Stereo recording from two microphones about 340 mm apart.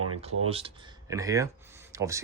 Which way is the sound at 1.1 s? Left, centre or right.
Centre.